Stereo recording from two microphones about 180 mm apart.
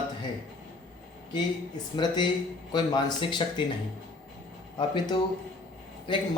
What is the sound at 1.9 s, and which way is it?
Speech, 25° left (ahead or behind).